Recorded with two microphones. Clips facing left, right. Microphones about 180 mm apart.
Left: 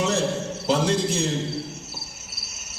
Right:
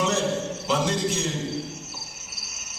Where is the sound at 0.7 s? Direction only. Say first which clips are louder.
Left 3 dB; 35° left (ahead or behind).